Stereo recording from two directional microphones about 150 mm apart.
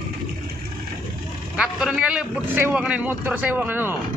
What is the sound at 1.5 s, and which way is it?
A man's voice, 5° right (ahead or behind).